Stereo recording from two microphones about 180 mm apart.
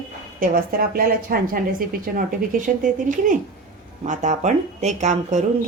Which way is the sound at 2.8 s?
45° right (ahead or behind).